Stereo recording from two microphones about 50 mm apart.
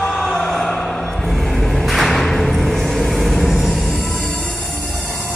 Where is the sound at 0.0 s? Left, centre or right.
Centre.